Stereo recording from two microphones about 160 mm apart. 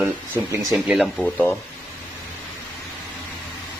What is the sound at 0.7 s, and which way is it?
Speech, centre (ahead or behind).